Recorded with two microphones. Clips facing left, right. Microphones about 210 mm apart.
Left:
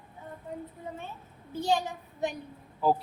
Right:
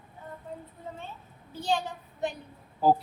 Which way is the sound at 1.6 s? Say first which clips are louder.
Left 1 dB; 15° left (ahead or behind).